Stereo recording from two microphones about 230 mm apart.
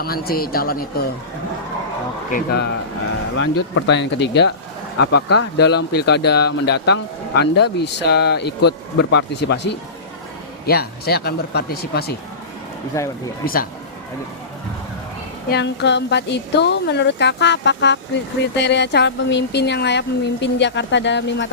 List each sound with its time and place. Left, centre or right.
0.0 s speech: left
3.3 s a woman's voice: left
12.9 s speech: centre
13.4 s speech: left
15.4 s a woman's voice: left